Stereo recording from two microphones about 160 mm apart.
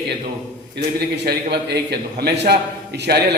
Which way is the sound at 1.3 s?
90° right.